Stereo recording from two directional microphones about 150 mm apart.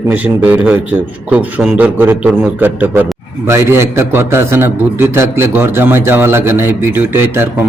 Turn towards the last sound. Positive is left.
turn(degrees=-15)  # may be behind; listen again after turning